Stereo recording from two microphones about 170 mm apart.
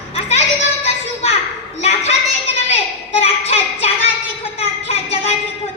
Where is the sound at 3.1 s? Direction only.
40° left (ahead or behind).